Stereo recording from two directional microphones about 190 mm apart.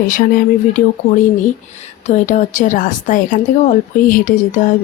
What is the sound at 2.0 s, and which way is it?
A woman's voice, 40° left (ahead or behind).